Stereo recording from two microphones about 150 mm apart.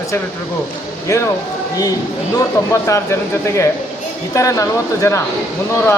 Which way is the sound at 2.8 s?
20° left (ahead or behind).